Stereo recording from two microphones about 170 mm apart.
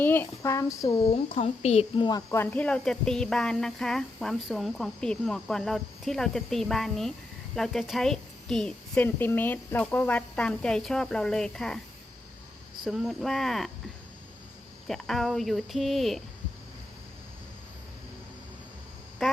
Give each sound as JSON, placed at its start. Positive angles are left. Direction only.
{"t": 0.0, "sound": "speech", "side_deg": 10}
{"t": 1.0, "sound": "speech", "side_deg": 40}
{"t": 2.0, "sound": "speech", "side_deg": 20}
{"t": 12.8, "sound": "speech", "side_deg": 0}
{"t": 14.8, "sound": "speech", "side_deg": 0}
{"t": 19.2, "sound": "speech", "side_deg": 0}